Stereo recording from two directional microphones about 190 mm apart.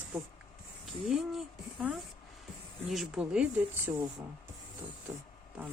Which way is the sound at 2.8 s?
Centre (ahead or behind).